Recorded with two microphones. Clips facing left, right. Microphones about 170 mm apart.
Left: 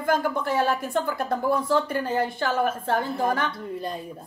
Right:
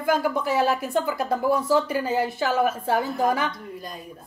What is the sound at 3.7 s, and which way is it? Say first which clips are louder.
Speech: left 6 dB; 30° left (ahead or behind).